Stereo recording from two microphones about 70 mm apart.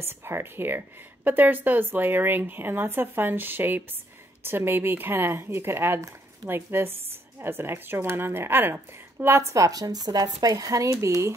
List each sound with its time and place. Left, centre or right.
0.0 s a woman's voice: right
9.4 s speech: right